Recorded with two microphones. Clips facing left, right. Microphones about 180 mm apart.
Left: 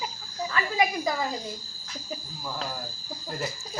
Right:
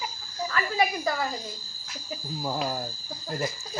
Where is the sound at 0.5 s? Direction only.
15° left (ahead or behind).